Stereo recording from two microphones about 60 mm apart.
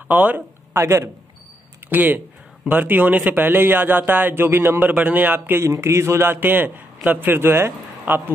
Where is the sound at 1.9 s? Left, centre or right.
Right.